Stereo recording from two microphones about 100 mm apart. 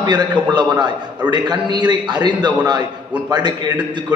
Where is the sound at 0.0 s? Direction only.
50° right (ahead or behind).